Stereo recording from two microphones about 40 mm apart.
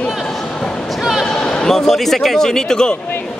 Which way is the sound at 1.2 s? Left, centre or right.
Centre.